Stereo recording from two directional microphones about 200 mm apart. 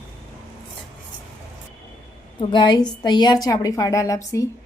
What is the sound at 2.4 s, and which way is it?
A woman's voice, 25° left (ahead or behind).